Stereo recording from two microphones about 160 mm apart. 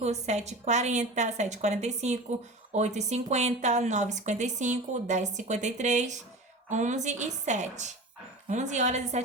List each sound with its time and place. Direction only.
0.0 s a woman's voice: 45° right (ahead or behind)